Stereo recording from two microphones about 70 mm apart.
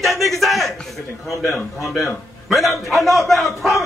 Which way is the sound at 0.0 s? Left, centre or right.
Centre.